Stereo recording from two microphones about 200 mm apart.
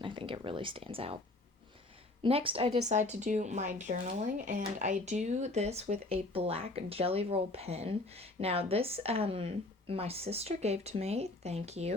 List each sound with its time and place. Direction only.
0.0 s speech: 25° right (ahead or behind)
2.2 s speech: 25° right (ahead or behind)